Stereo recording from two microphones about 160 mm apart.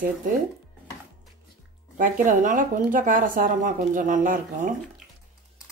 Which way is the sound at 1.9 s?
60° right (ahead or behind).